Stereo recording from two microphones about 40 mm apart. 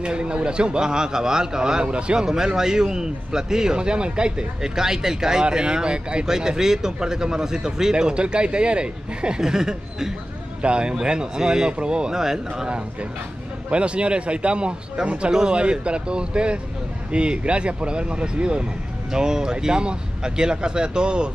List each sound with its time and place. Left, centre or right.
0.0 s a man's voice: right
2.2 s a man's voice: centre
9.4 s a man's voice: centre
10.6 s a man's voice: right
12.2 s a man's voice: centre
13.7 s a man's voice: right